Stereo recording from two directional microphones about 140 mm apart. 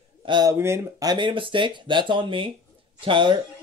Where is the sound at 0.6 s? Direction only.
20° right (ahead or behind).